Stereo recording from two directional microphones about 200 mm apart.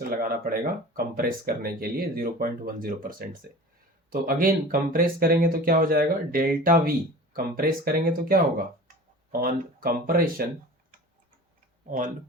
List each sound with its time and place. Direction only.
0.1 s speech: 45° right (ahead or behind)
9.4 s speech: 45° right (ahead or behind)
11.9 s speech: 40° right (ahead or behind)